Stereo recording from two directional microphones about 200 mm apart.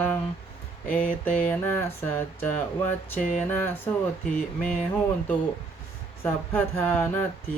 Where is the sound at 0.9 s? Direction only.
5° left (ahead or behind).